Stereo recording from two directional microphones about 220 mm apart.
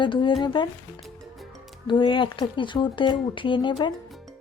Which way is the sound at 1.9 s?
20° left (ahead or behind).